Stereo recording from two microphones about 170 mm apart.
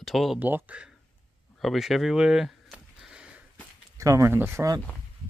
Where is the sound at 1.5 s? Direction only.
Centre (ahead or behind).